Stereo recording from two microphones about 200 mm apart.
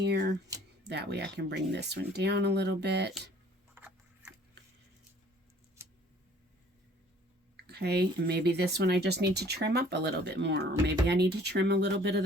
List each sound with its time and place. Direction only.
0.0 s speech: 60° right (ahead or behind)
3.8 s a sound: 10° right (ahead or behind)
7.5 s speech: 55° right (ahead or behind)